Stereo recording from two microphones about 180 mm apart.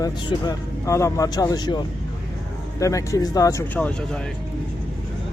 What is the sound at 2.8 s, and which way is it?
Speech, 15° left (ahead or behind).